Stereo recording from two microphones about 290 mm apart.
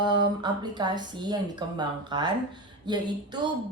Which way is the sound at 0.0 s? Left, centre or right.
Centre.